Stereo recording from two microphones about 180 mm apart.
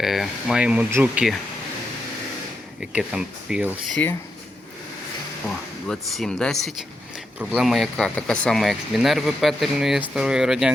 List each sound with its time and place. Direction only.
0.0 s speech: centre (ahead or behind)
2.8 s speech: 5° right (ahead or behind)
5.9 s speech: 5° left (ahead or behind)